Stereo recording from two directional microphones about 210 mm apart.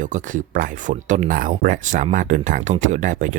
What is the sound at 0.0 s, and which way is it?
Speech, 40° right (ahead or behind).